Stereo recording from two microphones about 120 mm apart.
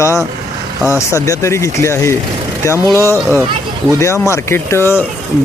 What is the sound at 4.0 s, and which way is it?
Speech, 25° left (ahead or behind).